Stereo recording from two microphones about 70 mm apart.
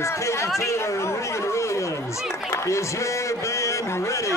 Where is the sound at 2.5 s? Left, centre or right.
Left.